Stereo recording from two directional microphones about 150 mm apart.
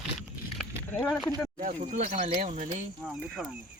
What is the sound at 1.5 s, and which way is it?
Speech, 50° right (ahead or behind).